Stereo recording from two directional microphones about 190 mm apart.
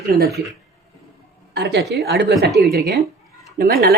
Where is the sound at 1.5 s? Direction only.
60° right (ahead or behind).